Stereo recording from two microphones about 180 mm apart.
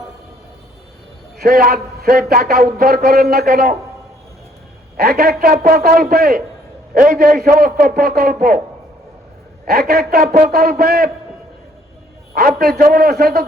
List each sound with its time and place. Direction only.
1.4 s a man's voice: 55° right (ahead or behind)
4.9 s a man's voice: 60° right (ahead or behind)
9.6 s a man's voice: 60° right (ahead or behind)
12.3 s a man's voice: 55° right (ahead or behind)